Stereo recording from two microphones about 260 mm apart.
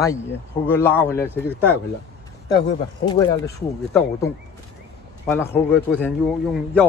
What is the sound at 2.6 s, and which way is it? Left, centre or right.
Speech, centre.